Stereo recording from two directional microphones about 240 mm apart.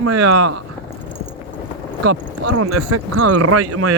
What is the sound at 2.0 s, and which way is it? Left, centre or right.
Speech, right.